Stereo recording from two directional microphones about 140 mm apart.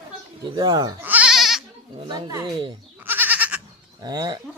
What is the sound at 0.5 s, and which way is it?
Speech, 30° right (ahead or behind).